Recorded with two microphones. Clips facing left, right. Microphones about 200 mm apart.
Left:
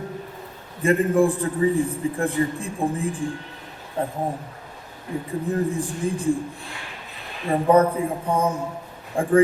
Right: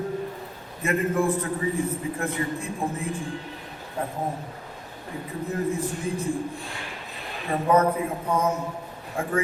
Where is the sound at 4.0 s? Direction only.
30° left (ahead or behind).